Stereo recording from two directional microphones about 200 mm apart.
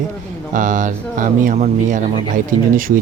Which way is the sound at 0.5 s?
40° right (ahead or behind).